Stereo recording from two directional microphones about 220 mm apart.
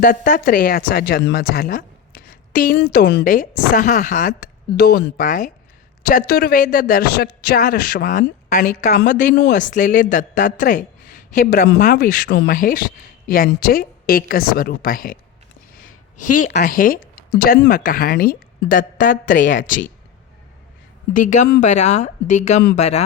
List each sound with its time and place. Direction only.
0.0 s a woman's voice: 40° left (ahead or behind)
4.8 s a woman's voice: 45° left (ahead or behind)
15.9 s a sound: 90° left
16.5 s a woman's voice: 45° left (ahead or behind)
21.2 s a woman's voice: 35° left (ahead or behind)